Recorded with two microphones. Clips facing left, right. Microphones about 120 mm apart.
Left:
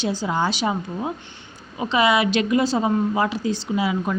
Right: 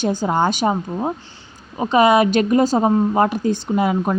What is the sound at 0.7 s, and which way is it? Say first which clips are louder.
Speech: right 4 dB; 35° right (ahead or behind).